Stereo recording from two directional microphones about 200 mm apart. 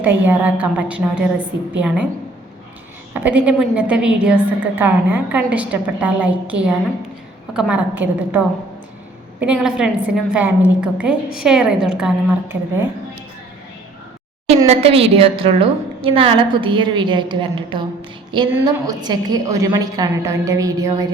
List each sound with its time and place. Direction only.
0.0 s a woman's voice: 10° right (ahead or behind)
3.1 s a woman's voice: 10° right (ahead or behind)
9.4 s a woman's voice: 5° right (ahead or behind)
14.7 s a woman's voice: 30° right (ahead or behind)